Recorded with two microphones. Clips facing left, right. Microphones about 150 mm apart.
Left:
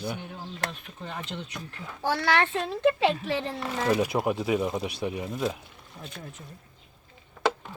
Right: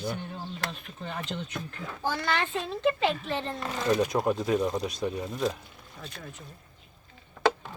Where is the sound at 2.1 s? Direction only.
80° left.